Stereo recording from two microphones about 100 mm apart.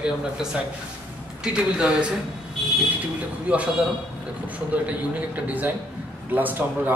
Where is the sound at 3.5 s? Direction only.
15° right (ahead or behind).